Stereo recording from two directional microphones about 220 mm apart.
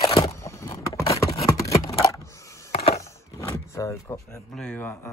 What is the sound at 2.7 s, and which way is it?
Wood, 30° left (ahead or behind).